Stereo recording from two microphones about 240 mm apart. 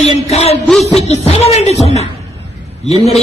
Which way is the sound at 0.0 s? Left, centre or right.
Left.